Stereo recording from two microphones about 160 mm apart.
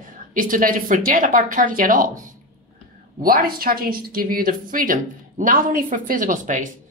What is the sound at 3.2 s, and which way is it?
Speech, 65° right (ahead or behind).